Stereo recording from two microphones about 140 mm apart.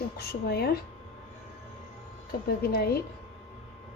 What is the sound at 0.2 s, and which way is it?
Speech, 90° left.